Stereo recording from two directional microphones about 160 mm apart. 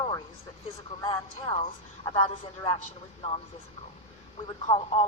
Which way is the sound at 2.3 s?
35° left (ahead or behind).